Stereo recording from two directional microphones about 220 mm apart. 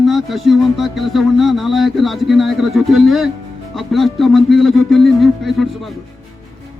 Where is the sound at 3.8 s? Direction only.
Centre (ahead or behind).